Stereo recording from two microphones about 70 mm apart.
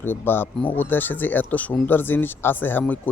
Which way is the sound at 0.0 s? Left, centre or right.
Left.